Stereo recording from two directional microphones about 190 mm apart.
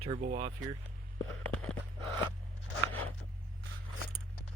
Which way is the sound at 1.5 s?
5° left (ahead or behind).